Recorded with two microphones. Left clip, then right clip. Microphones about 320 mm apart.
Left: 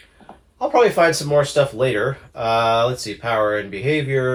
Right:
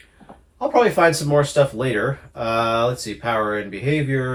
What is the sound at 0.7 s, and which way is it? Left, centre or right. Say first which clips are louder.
Speech: left 1 dB; left.